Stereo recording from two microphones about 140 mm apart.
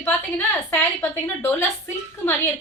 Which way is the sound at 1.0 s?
15° left (ahead or behind).